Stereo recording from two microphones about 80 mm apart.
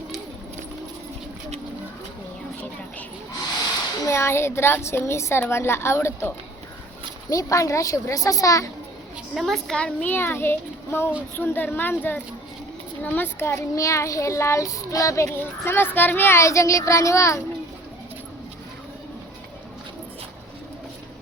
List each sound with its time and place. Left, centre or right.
4.0 s a woman's voice: left
7.3 s a child's voice: left
9.3 s a child's voice: centre
10.1 s a child's voice: left
13.0 s a woman's voice: left
15.3 s a woman's voice: left